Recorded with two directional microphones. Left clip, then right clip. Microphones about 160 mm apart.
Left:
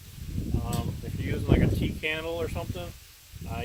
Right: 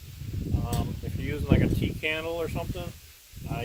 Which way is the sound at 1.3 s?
20° right (ahead or behind).